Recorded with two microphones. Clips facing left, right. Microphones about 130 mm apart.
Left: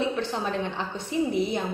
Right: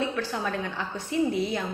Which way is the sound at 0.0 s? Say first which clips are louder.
Left 1 dB; 20° left (ahead or behind).